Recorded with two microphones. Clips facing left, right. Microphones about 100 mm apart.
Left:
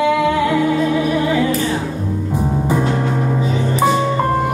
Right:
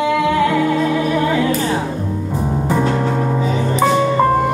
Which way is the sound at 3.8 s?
Centre (ahead or behind).